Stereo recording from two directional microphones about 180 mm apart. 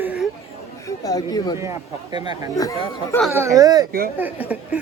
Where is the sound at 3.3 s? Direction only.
15° right (ahead or behind).